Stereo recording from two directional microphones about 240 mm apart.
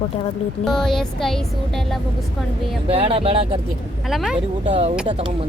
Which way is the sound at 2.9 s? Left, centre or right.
Right.